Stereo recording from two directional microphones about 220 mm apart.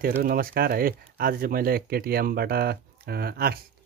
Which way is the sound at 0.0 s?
40° right (ahead or behind).